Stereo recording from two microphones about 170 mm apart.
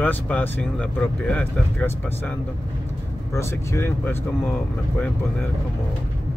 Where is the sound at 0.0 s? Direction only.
10° left (ahead or behind).